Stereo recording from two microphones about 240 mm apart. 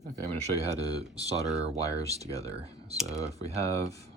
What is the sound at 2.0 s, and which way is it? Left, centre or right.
Speech, right.